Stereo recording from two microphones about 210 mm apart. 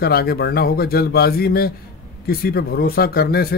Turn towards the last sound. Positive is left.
turn(degrees=45)  # may be behind; listen again after turning